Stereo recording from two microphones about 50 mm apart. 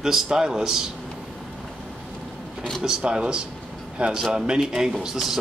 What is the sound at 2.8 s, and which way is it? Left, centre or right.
Speech, centre.